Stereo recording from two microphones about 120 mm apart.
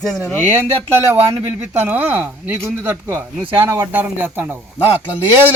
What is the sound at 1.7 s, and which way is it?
Speech, 15° right (ahead or behind).